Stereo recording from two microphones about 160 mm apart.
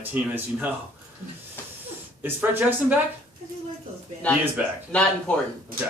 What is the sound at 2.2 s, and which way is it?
Speech, 10° right (ahead or behind).